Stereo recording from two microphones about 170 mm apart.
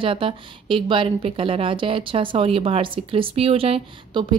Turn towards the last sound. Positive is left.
turn(degrees=-35)  # may be behind; listen again after turning